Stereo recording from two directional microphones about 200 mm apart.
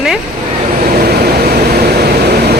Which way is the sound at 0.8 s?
50° right (ahead or behind).